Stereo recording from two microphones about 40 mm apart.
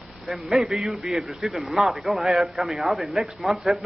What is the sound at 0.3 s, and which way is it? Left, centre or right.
Speech, centre.